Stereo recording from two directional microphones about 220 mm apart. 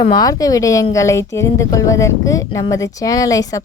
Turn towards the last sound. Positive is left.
turn(degrees=15)  # may be behind; listen again after turning